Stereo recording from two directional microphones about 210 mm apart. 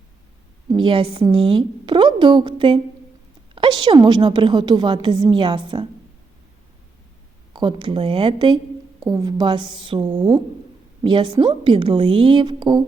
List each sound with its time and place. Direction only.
0.7 s a woman's voice: 25° right (ahead or behind)
7.5 s a woman's voice: 20° right (ahead or behind)